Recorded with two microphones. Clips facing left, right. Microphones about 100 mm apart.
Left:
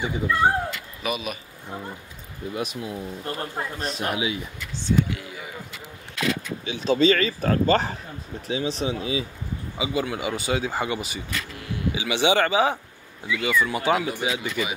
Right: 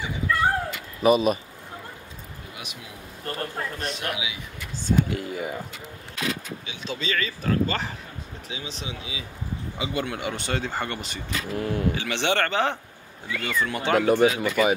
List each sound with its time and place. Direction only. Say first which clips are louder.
0.3 s speech: left 1 dB; 20° left (ahead or behind)
1.0 s speech: right 10 dB; 35° right (ahead or behind)
2.5 s speech: left 13 dB; 40° left (ahead or behind)
3.3 s speech: right 1 dB; 15° left (ahead or behind)
3.8 s speech: left 7 dB; 35° left (ahead or behind)
4.8 s speech: even; 45° right (ahead or behind)
6.6 s speech: left 12 dB; 35° left (ahead or behind)
9.8 s speech: left 3 dB; 5° left (ahead or behind)
11.5 s speech: right 7 dB; 45° right (ahead or behind)
11.9 s speech: left 3 dB; 10° left (ahead or behind)
13.3 s speech: left 5 dB; 50° right (ahead or behind)
13.6 s speech: even; 5° left (ahead or behind)
14.0 s speech: right 8 dB; 55° right (ahead or behind)